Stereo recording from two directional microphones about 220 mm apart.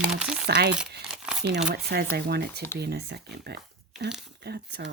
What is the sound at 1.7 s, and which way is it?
Speech, 45° right (ahead or behind).